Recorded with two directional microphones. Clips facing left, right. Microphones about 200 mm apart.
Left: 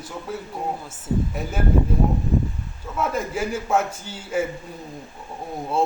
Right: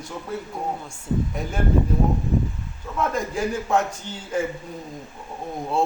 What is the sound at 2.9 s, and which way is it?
A man's voice, 5° left (ahead or behind).